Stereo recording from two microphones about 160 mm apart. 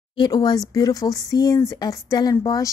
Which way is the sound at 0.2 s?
25° left (ahead or behind).